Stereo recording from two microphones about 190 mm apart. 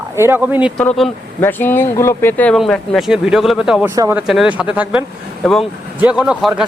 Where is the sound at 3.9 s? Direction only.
20° right (ahead or behind).